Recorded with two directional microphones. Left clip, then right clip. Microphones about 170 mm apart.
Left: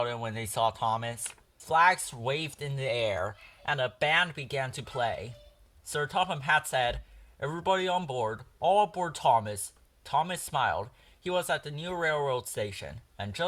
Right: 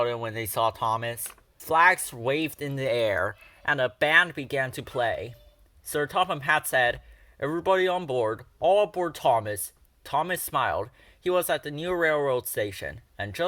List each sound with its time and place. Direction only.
0.0 s speech: 40° right (ahead or behind)